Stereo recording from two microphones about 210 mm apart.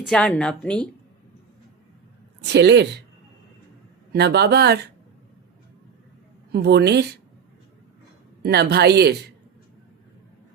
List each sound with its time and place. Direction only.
0.0 s a woman's voice: 5° left (ahead or behind)
2.4 s speech: 55° right (ahead or behind)
4.1 s speech: 50° right (ahead or behind)
6.5 s speech: 50° right (ahead or behind)
8.4 s speech: 50° right (ahead or behind)